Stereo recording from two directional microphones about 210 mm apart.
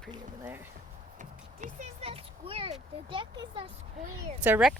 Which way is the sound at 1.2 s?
35° right (ahead or behind).